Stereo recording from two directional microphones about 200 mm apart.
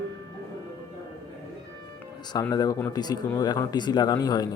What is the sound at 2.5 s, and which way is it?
Speech, 15° left (ahead or behind).